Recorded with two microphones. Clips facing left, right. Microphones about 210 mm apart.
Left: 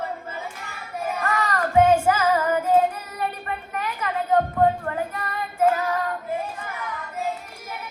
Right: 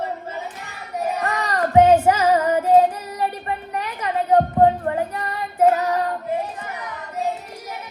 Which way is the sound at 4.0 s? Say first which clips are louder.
Right 4 dB; 30° right (ahead or behind).